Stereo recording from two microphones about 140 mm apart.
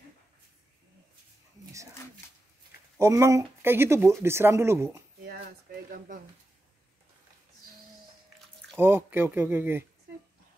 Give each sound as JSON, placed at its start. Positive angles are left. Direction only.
{"t": 3.0, "sound": "speech", "side_deg": -20}
{"t": 5.4, "sound": "a sound", "side_deg": -75}
{"t": 8.7, "sound": "speech", "side_deg": -15}